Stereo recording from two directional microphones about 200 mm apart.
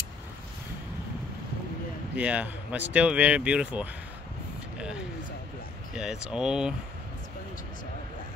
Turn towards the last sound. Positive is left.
turn(degrees=-5)  # may be behind; listen again after turning